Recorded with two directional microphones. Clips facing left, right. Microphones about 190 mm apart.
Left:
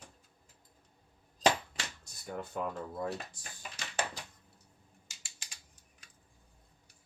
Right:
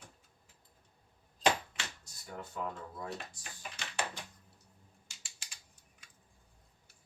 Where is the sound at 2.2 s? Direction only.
55° left (ahead or behind).